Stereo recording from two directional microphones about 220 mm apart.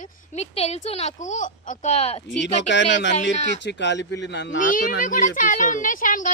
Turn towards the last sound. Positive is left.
turn(degrees=35)  # may be behind; listen again after turning